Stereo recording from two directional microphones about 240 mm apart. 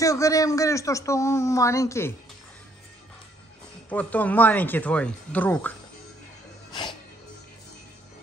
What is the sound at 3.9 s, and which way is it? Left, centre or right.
Speech, centre.